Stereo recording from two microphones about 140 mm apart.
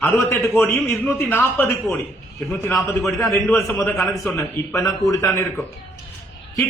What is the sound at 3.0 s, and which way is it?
A man's voice, centre (ahead or behind).